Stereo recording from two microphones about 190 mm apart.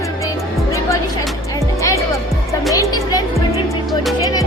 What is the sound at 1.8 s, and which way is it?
Music, 15° left (ahead or behind).